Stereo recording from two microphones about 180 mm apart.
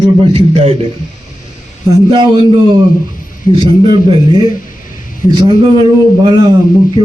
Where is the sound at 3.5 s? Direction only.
25° right (ahead or behind).